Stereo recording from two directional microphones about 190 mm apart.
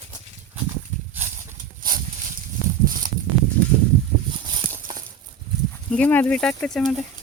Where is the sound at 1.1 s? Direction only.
10° right (ahead or behind).